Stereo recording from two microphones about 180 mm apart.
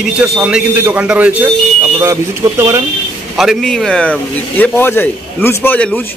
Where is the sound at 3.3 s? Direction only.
Centre (ahead or behind).